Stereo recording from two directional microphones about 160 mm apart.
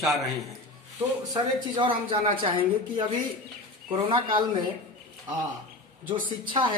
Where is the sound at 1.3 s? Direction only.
30° right (ahead or behind).